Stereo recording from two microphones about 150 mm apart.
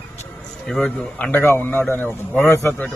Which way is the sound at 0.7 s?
10° left (ahead or behind).